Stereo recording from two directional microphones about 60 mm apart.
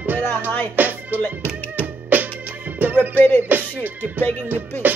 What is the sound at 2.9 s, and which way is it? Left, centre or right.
Music, left.